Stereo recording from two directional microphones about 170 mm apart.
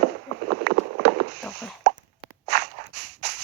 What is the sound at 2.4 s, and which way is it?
Walk, 80° right.